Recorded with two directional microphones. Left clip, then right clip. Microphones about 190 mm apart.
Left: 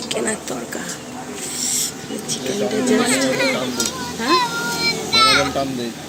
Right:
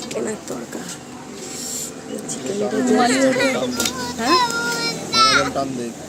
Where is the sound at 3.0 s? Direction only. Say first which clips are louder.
Right 2 dB; 50° right (ahead or behind).